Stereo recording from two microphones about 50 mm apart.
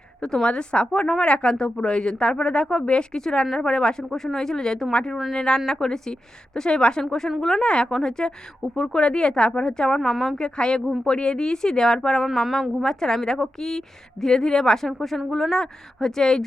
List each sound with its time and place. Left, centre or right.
0.2 s a woman's voice: centre
5.1 s a woman's voice: centre
10.0 s speech: centre
10.3 s a woman's voice: centre
12.2 s a woman's voice: centre